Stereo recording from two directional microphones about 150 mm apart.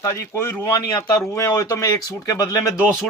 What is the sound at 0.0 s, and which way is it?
A man's voice, 20° left (ahead or behind).